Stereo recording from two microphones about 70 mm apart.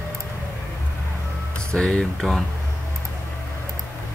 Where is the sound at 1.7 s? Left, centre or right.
Centre.